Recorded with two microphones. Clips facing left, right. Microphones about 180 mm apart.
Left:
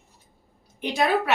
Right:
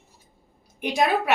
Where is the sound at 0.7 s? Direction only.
15° right (ahead or behind).